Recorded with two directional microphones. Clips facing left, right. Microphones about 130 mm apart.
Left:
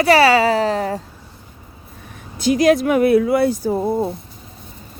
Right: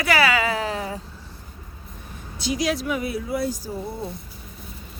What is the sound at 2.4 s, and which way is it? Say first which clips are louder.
Speech: left 10 dB; 55° left (ahead or behind).